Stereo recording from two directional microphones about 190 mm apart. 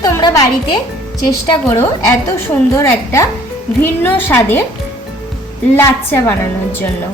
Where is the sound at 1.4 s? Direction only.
20° left (ahead or behind).